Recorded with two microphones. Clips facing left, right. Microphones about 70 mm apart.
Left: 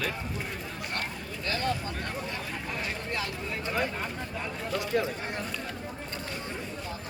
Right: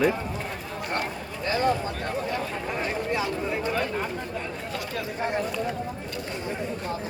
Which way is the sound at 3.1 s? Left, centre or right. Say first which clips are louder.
Right 7 dB; centre.